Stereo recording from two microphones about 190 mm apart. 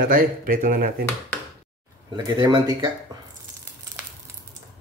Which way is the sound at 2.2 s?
25° right (ahead or behind).